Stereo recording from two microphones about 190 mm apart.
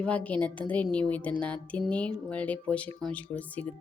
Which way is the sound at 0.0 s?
5° left (ahead or behind).